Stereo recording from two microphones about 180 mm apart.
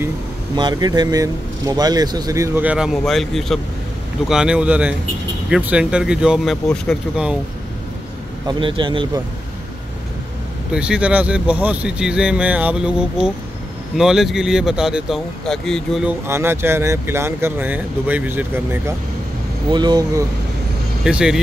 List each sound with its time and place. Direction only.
0.6 s speech: 25° right (ahead or behind); by 7.3 s centre (ahead or behind)
8.5 s speech: 25° right (ahead or behind)
10.7 s speech: 5° right (ahead or behind)
19.7 s speech: 25° right (ahead or behind)
21.0 s speech: 5° right (ahead or behind)